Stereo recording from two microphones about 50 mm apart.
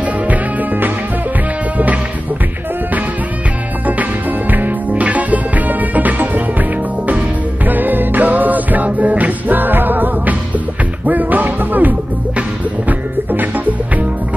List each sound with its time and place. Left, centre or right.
0.3 s music: right
3.8 s music: right
7.6 s music: right